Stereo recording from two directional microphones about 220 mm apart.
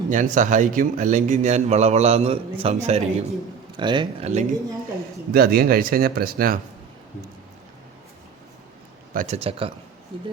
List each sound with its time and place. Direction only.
0.1 s a man's voice: 35° right (ahead or behind)
5.3 s a man's voice: 40° right (ahead or behind)
9.1 s speech: 30° right (ahead or behind)